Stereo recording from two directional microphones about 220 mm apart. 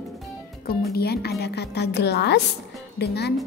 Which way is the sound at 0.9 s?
45° left (ahead or behind).